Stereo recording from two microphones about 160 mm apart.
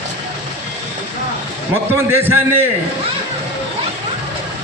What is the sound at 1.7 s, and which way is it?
Speech, 15° right (ahead or behind).